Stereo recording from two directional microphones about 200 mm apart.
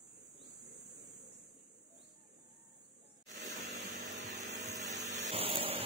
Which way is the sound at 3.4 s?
35° right (ahead or behind).